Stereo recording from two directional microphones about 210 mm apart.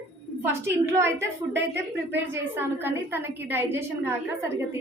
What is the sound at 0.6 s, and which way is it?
A woman's voice, 10° right (ahead or behind).